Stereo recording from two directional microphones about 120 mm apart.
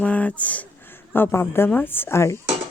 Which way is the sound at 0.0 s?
10° left (ahead or behind).